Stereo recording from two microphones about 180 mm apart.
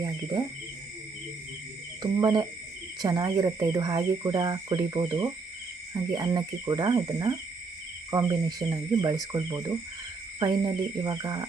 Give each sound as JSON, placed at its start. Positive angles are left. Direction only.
{"t": 2.0, "sound": "speech", "side_deg": -20}